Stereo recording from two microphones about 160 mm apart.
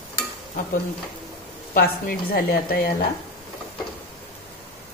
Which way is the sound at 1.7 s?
65° left (ahead or behind).